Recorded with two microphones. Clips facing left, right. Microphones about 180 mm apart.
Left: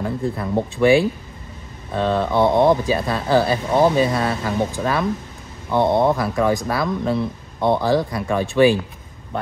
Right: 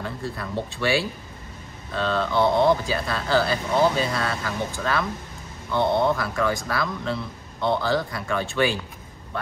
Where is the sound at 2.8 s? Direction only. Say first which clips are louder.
Left 6 dB; 20° left (ahead or behind).